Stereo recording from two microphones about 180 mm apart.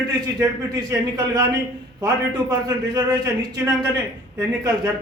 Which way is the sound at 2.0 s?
20° right (ahead or behind).